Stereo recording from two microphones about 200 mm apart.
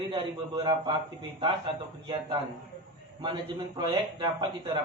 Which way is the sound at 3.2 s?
25° right (ahead or behind).